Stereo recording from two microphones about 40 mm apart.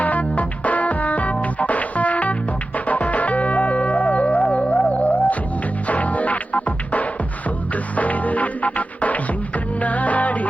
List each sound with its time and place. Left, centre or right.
0.0 s music: left